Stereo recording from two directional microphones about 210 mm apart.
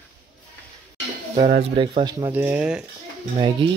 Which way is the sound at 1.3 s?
35° right (ahead or behind).